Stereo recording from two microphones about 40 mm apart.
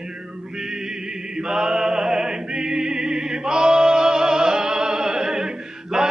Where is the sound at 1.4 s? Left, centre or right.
Centre.